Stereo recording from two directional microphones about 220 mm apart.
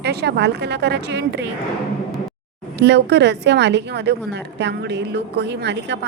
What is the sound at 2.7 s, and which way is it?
A woman's voice, 50° right (ahead or behind).